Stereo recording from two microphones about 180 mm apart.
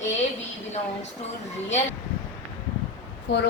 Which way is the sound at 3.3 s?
70° left (ahead or behind).